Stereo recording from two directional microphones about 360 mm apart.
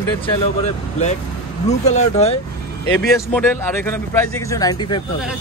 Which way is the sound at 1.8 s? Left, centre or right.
Centre.